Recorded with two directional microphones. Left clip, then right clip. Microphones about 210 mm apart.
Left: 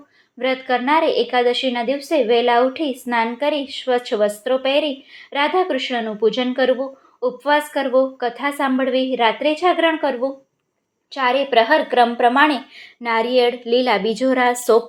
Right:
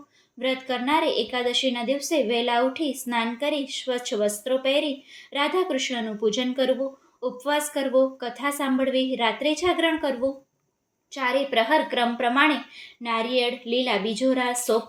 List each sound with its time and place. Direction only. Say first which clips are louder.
0.3 s a woman's voice: left 7 dB; 5° left (ahead or behind)